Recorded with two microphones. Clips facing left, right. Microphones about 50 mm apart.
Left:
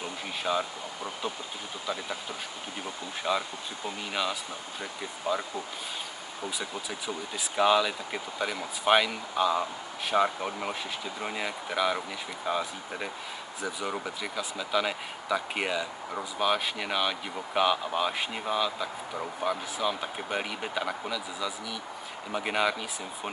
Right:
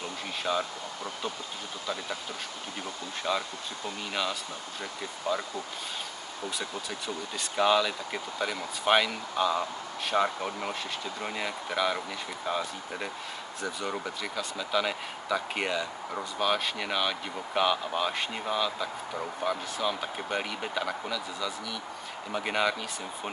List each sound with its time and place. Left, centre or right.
0.4 s speech: centre
3.3 s speech: centre